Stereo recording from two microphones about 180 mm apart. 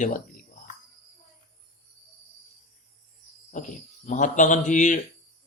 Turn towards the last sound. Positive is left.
turn(degrees=45)  # may be behind; listen again after turning